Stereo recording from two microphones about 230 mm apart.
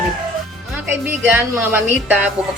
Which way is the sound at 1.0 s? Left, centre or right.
Centre.